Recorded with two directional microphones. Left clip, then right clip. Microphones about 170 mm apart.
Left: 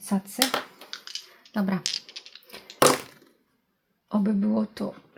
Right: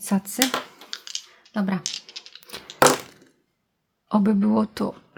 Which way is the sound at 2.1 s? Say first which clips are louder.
Right 2 dB; 5° right (ahead or behind).